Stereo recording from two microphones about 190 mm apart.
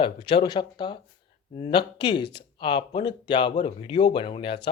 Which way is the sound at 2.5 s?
25° left (ahead or behind).